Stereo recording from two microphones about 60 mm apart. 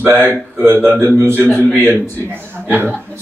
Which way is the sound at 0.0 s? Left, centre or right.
Right.